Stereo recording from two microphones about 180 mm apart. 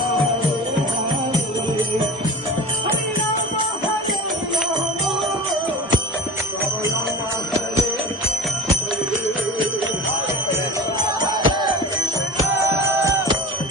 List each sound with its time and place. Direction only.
11.2 s music: 25° right (ahead or behind)
13.1 s music: 20° right (ahead or behind)